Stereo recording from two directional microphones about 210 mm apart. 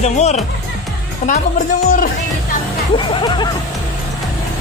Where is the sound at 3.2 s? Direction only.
20° left (ahead or behind).